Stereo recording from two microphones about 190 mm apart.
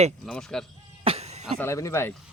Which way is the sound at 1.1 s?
35° right (ahead or behind).